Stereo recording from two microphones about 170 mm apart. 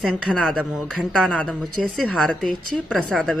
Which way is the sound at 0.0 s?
5° left (ahead or behind).